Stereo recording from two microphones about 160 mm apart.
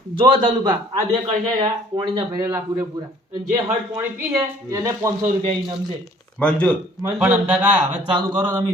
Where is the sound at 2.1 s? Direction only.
25° right (ahead or behind).